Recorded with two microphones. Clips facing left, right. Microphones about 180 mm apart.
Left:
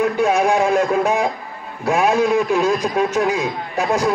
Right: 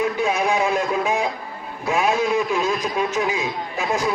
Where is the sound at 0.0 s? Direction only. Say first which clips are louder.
Left 5 dB; 50° left (ahead or behind).